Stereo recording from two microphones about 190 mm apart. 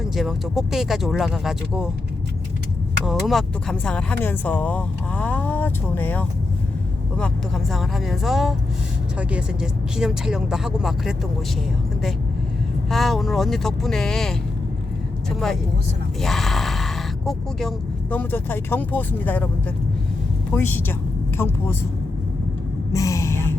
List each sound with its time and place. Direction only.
0.0 s speech: centre (ahead or behind)
3.1 s speech: centre (ahead or behind)
12.9 s speech: centre (ahead or behind)
16.2 s speech: centre (ahead or behind)
20.5 s speech: 10° left (ahead or behind)
22.9 s a sound: 15° left (ahead or behind)